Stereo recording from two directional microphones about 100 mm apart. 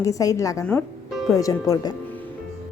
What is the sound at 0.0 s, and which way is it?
Speech, 35° left (ahead or behind).